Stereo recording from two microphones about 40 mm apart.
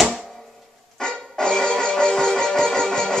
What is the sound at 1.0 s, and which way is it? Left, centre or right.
Music, centre.